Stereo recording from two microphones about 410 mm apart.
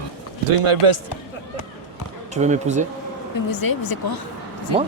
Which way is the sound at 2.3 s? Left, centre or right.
Centre.